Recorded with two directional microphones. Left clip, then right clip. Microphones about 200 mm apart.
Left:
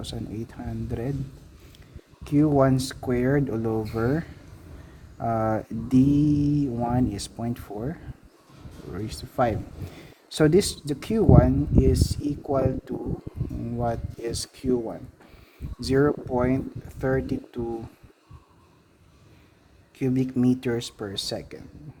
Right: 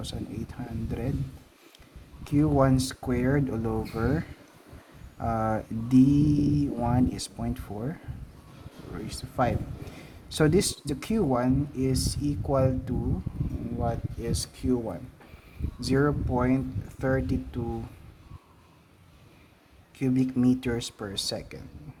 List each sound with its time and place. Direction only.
0.0 s speech: 25° left (ahead or behind)
2.2 s speech: 25° left (ahead or behind)
13.7 s speech: 30° left (ahead or behind)
20.0 s speech: 20° left (ahead or behind)